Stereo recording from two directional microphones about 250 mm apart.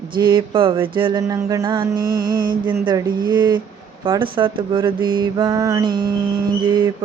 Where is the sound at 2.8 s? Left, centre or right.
Centre.